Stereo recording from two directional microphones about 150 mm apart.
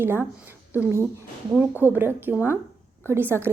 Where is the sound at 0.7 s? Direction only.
15° right (ahead or behind).